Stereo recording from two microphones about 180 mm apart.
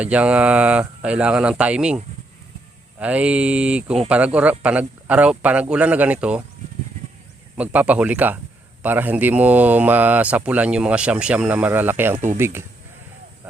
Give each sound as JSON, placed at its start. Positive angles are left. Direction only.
{"t": 0.0, "sound": "speech", "side_deg": -5}
{"t": 3.0, "sound": "speech", "side_deg": -5}
{"t": 7.5, "sound": "speech", "side_deg": -10}